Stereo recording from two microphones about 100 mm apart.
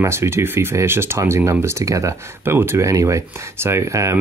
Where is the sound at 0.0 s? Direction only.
25° right (ahead or behind).